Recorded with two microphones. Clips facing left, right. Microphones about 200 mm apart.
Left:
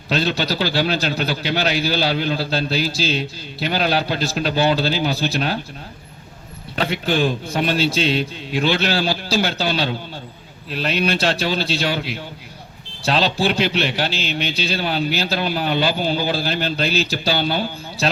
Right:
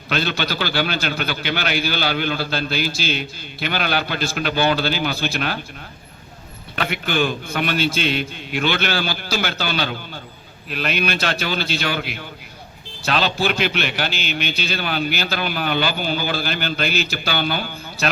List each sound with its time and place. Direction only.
0.1 s a man's voice: 30° left (ahead or behind)
6.7 s a man's voice: 30° left (ahead or behind)